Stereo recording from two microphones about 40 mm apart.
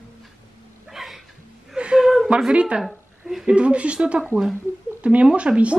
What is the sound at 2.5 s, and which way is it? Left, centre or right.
Speech, right.